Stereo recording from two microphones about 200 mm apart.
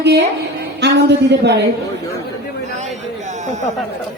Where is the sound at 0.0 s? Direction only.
60° right (ahead or behind).